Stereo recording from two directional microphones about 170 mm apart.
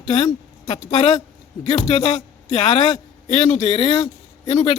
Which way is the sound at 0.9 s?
40° left (ahead or behind).